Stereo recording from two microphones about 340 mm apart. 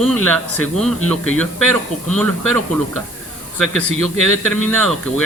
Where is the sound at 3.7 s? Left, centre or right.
Centre.